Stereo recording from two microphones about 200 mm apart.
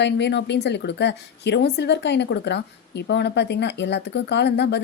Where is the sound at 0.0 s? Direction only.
60° left (ahead or behind).